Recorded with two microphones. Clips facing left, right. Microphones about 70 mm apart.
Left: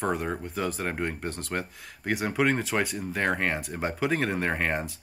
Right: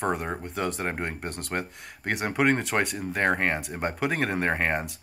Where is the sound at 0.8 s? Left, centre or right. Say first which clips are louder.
Even; centre.